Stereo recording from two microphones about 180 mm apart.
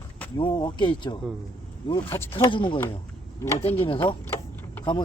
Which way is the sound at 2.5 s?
30° left (ahead or behind).